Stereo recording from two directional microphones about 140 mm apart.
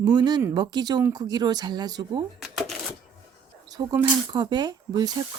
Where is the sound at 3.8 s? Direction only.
30° right (ahead or behind).